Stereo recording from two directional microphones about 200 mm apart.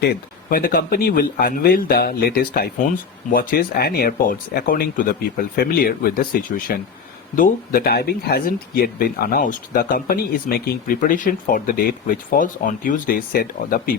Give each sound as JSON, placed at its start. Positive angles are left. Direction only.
{"t": 0.5, "sound": "speech", "side_deg": 45}